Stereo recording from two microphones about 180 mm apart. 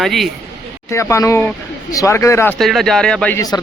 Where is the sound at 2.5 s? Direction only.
Centre (ahead or behind).